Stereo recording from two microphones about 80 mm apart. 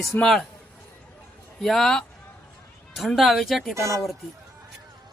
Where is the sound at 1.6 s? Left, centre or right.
Centre.